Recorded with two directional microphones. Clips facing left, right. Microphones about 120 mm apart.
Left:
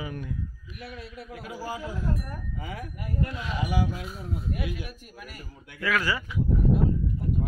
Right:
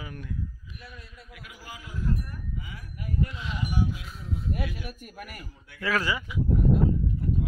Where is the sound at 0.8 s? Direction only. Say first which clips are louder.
Left 10 dB; 75° left (ahead or behind).